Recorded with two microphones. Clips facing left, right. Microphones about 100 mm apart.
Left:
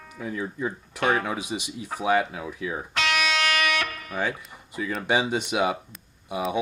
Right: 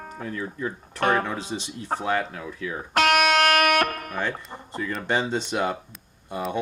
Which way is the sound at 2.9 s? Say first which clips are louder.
Right 7 dB; 50° right (ahead or behind).